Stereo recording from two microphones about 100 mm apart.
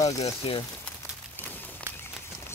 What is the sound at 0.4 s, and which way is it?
Speech, 55° left (ahead or behind).